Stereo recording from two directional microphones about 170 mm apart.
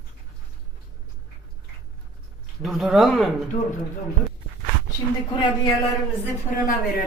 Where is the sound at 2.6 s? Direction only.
Centre (ahead or behind).